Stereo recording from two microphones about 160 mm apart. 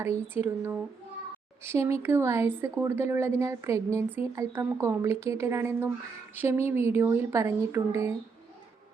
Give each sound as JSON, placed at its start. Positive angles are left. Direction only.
{"t": 0.2, "sound": "speech", "side_deg": -15}